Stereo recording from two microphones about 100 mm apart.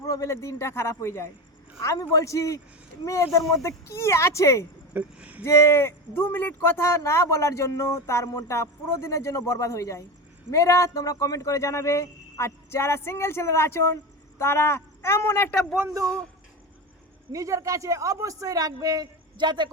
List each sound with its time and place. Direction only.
0.0 s a man's voice: 30° left (ahead or behind)
4.9 s speech: 15° right (ahead or behind)
5.5 s a man's voice: 25° left (ahead or behind)
17.3 s speech: 30° right (ahead or behind); by 19.7 s 50° right (ahead or behind)